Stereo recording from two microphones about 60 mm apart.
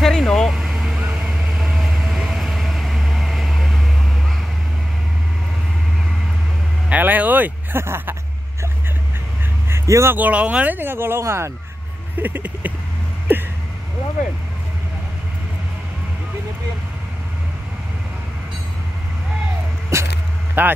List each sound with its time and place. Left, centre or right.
0.0 s vehicle: centre
0.5 s vehicle: centre
6.9 s vehicle: right
7.7 s speech: right
9.7 s vehicle: right
10.1 s speech: right
12.2 s speech: right
19.9 s speech: right
20.6 s speech: right